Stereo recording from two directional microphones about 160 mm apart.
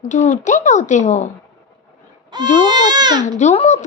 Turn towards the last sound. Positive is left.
turn(degrees=45)  # may be behind; listen again after turning